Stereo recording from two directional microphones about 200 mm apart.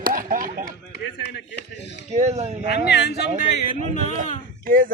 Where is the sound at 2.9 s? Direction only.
60° left (ahead or behind).